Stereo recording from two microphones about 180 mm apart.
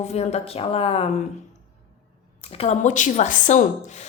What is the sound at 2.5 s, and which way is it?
Speech, 35° left (ahead or behind).